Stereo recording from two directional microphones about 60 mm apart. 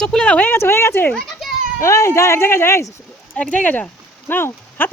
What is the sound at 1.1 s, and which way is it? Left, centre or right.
Children playing, centre.